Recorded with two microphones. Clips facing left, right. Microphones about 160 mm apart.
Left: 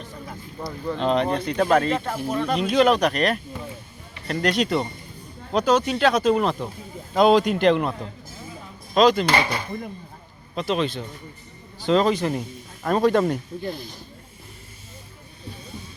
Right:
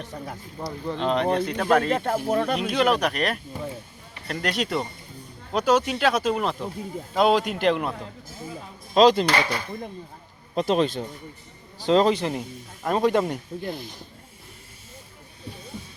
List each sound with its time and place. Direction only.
0.0 s speech: 70° right (ahead or behind)
0.9 s speech: centre (ahead or behind)
2.0 s speech: 55° right (ahead or behind)
2.6 s speech: 5° right (ahead or behind)
9.0 s a man's voice: 30° right (ahead or behind)
9.3 s speech: 10° left (ahead or behind)
10.5 s speech: 40° right (ahead or behind)
11.8 s a man's voice: 30° right (ahead or behind)
12.8 s speech: 20° right (ahead or behind)